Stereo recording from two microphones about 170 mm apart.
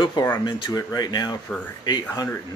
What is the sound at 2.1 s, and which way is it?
Speech, 20° left (ahead or behind).